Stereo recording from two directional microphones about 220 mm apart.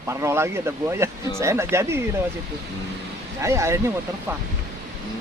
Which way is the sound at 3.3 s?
15° right (ahead or behind).